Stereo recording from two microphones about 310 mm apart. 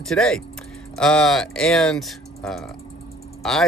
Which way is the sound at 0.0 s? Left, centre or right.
Centre.